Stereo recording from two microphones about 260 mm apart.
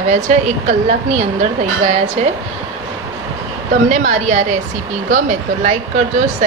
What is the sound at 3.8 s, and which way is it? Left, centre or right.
A woman's voice, right.